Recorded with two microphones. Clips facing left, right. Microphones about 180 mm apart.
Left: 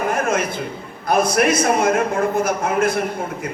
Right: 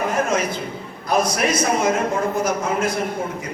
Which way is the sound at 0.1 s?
55° left (ahead or behind).